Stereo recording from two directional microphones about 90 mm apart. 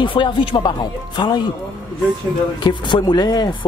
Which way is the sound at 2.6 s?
60° left (ahead or behind).